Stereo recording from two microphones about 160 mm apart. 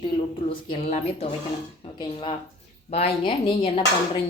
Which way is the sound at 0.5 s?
35° left (ahead or behind).